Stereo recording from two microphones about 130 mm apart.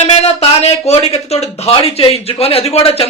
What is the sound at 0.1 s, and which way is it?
A man's voice, 55° left (ahead or behind).